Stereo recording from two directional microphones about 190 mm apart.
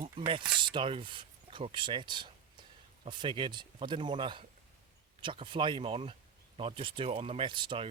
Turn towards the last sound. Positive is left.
turn(degrees=-25)  # may be behind; listen again after turning